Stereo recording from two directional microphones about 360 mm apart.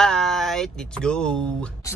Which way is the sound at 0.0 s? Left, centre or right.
Centre.